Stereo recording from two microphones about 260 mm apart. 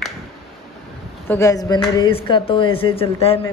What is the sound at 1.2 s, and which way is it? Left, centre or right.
Speech, centre.